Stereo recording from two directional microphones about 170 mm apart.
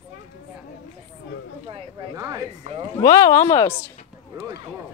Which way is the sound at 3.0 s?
20° left (ahead or behind).